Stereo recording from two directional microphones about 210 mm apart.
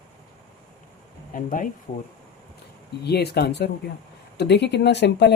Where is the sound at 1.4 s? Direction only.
40° left (ahead or behind).